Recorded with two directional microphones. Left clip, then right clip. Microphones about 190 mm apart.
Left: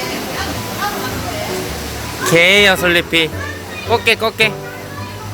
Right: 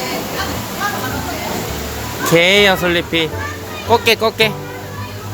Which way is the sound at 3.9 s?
15° right (ahead or behind).